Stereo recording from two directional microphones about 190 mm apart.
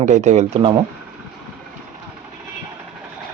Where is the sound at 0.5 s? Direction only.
25° right (ahead or behind).